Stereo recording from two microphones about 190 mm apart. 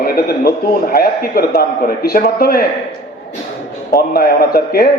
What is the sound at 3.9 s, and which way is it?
Speech, 55° left (ahead or behind).